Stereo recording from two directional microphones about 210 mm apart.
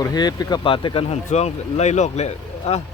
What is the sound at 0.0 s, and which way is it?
Speech, 20° left (ahead or behind).